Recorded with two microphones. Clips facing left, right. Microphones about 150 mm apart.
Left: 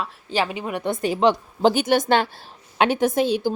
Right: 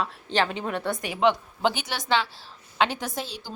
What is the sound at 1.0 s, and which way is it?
A woman's voice, 35° left (ahead or behind).